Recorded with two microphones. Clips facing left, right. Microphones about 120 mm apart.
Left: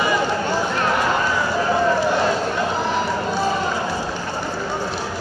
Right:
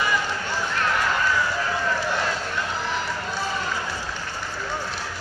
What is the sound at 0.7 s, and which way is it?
Run, 20° left (ahead or behind).